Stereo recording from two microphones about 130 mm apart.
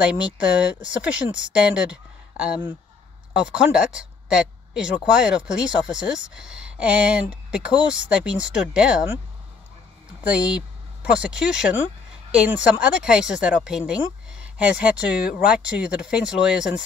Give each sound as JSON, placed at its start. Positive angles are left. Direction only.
{"t": 0.0, "sound": "speech", "side_deg": -10}
{"t": 10.3, "sound": "speech", "side_deg": -10}